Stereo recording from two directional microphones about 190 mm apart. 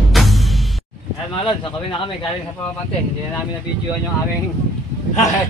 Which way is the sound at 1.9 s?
25° left (ahead or behind).